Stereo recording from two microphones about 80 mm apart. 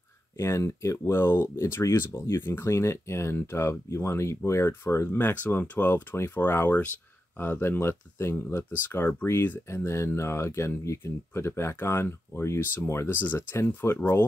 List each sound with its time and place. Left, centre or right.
0.4 s speech: left